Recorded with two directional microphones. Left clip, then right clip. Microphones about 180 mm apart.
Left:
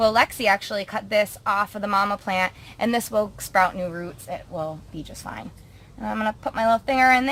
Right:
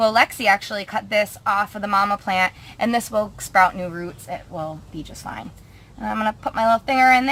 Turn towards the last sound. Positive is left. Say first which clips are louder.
# right 3 dB
turn(degrees=25)  # may be behind; listen again after turning